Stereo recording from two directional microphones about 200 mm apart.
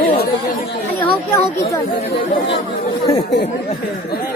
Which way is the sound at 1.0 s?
15° left (ahead or behind).